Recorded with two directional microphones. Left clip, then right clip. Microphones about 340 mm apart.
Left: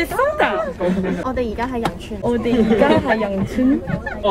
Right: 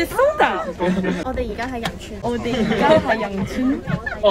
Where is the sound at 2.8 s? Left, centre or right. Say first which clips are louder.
Right 4 dB; centre.